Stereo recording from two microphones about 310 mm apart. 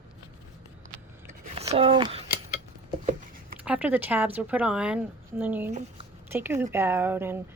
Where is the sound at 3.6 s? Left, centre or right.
Centre.